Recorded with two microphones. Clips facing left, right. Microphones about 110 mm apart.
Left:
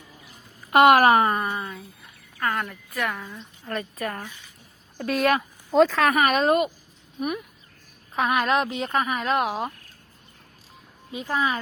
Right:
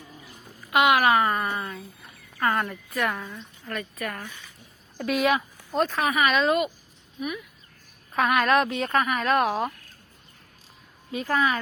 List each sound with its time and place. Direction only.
0.7 s a woman's voice: 45° left (ahead or behind)
1.1 s speech: 25° left (ahead or behind)
1.5 s speech: centre (ahead or behind)
3.7 s a woman's voice: 30° left (ahead or behind)
5.7 s speech: 90° left
6.1 s a woman's voice: 45° left (ahead or behind)
8.1 s speech: 20° left (ahead or behind)
11.1 s speech: 20° left (ahead or behind)